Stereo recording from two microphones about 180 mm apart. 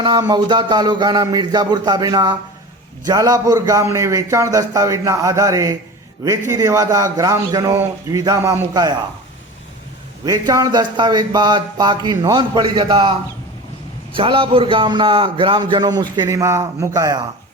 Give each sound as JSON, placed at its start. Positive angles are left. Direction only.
{"t": 0.0, "sound": "a man's voice", "side_deg": -25}
{"t": 10.2, "sound": "a man's voice", "side_deg": -20}